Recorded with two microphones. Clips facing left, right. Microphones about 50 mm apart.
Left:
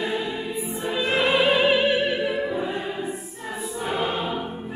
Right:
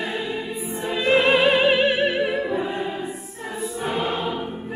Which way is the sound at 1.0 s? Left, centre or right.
Right.